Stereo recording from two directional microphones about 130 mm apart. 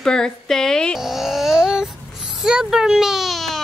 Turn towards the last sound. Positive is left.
turn(degrees=0)  # may be behind; listen again after turning